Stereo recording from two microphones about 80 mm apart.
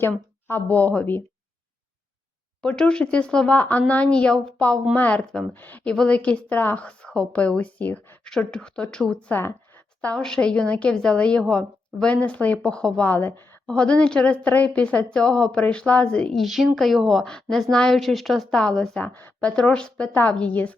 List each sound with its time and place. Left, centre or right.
0.0 s a sound: left
0.7 s a woman's voice: centre
2.6 s a woman's voice: centre
5.9 s speech: centre
8.2 s speech: centre
9.3 s a sound: left
10.2 s speech: centre
13.1 s speech: left
13.7 s speech: centre
18.9 s a woman's voice: left